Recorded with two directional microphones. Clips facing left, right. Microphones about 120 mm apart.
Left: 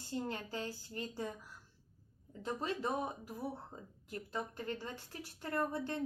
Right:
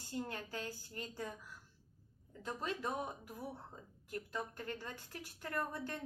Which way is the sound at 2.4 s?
25° left (ahead or behind).